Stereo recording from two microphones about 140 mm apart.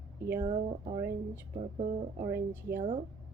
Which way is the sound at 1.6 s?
50° right (ahead or behind).